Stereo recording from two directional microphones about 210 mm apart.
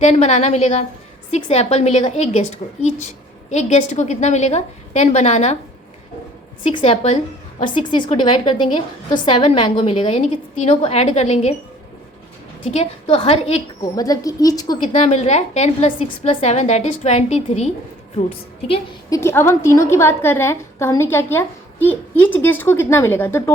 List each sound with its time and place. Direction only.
0.0 s a woman's voice: 30° left (ahead or behind)
6.7 s a woman's voice: 30° left (ahead or behind)
9.1 s a woman's voice: 25° left (ahead or behind)
12.7 s a woman's voice: 30° left (ahead or behind)
13.9 s a woman's voice: 15° left (ahead or behind)
14.9 s a woman's voice: 30° left (ahead or behind)
19.2 s a woman's voice: 10° left (ahead or behind)